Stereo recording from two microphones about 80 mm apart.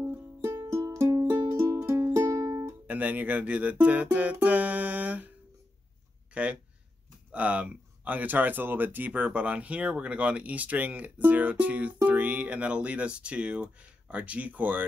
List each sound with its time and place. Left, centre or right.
0.0 s music: right
0.6 s music: right
2.9 s music: centre
6.3 s speech: centre